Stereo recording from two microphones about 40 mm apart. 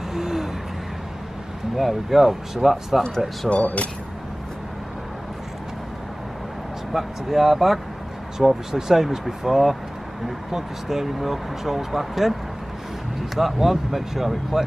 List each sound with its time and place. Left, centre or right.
0.1 s owl: centre
1.8 s speech: centre
3.4 s speech: left
6.9 s speech: centre
13.4 s speech: centre